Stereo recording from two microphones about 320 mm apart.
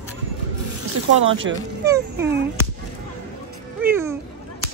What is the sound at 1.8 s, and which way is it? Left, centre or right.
Speech, centre.